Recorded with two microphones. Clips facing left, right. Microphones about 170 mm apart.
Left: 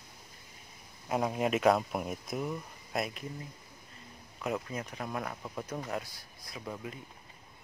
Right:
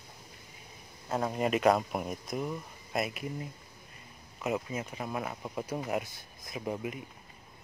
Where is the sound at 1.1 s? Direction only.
5° left (ahead or behind).